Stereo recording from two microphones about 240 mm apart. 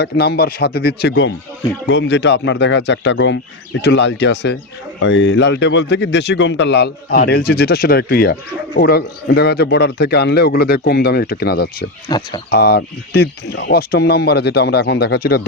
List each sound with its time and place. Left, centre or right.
0.0 s speech: left
12.0 s speech: centre
12.5 s speech: left